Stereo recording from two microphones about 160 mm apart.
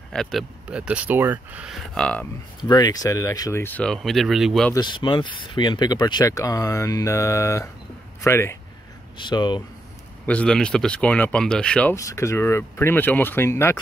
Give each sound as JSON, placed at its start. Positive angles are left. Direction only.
{"t": 0.1, "sound": "speech", "side_deg": 0}
{"t": 2.0, "sound": "speech", "side_deg": 5}
{"t": 2.7, "sound": "speech", "side_deg": 25}
{"t": 4.7, "sound": "speech", "side_deg": 30}
{"t": 9.2, "sound": "speech", "side_deg": 25}
{"t": 10.2, "sound": "speech", "side_deg": 5}
{"t": 11.9, "sound": "speech", "side_deg": 20}